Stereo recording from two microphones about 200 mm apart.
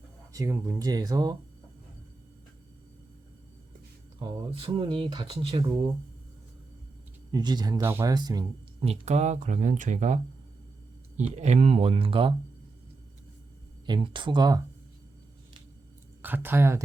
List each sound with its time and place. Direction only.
0.3 s speech: 15° right (ahead or behind)
4.2 s speech: 20° right (ahead or behind)
7.3 s speech: 20° right (ahead or behind)
8.8 s speech: 30° right (ahead or behind)
11.3 s speech: 35° right (ahead or behind)
13.8 s speech: 25° right (ahead or behind)
16.2 s speech: 10° right (ahead or behind)